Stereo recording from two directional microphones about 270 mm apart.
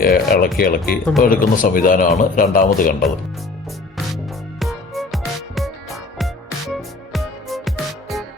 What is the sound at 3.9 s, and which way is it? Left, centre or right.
Music, centre.